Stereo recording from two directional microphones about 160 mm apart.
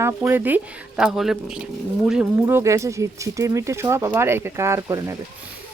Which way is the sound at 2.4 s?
15° right (ahead or behind).